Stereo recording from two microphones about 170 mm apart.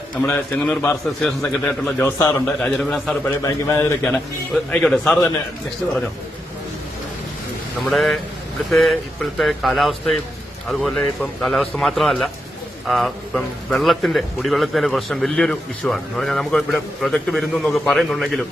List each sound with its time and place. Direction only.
0.2 s a man's voice: 10° left (ahead or behind)
3.4 s a man's voice: 15° left (ahead or behind)
4.0 s a man's voice: 5° left (ahead or behind)
7.9 s a man's voice: centre (ahead or behind)